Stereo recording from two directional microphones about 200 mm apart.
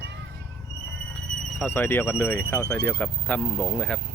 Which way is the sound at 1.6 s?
10° left (ahead or behind).